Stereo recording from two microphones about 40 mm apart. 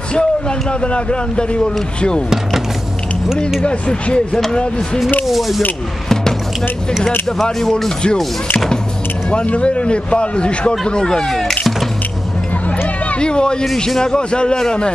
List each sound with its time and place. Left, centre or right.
0.1 s a man's voice: left
2.2 s a sound: centre
3.6 s a man's voice: left
4.3 s speech: centre
5.2 s speech: centre
9.3 s a man's voice: left; by 11.5 s centre
13.2 s a man's voice: left